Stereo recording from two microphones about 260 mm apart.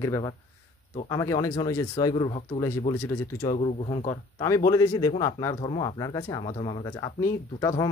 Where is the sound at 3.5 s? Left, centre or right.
Left.